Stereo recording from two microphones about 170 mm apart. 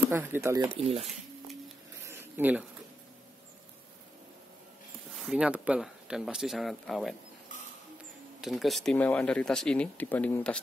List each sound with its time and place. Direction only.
0.1 s speech: 15° right (ahead or behind)
0.7 s speech: 35° right (ahead or behind)
2.0 s a sound: 15° right (ahead or behind)
5.1 s speech: 5° right (ahead or behind)
8.4 s speech: centre (ahead or behind)